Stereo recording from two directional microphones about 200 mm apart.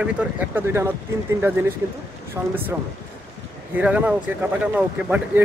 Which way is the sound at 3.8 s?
10° right (ahead or behind).